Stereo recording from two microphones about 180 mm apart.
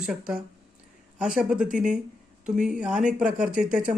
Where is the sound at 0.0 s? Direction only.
5° right (ahead or behind).